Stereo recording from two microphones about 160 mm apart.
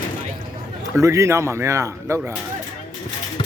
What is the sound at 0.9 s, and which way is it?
A man's voice, 20° right (ahead or behind).